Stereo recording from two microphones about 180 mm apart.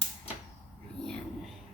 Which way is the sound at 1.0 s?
5° left (ahead or behind).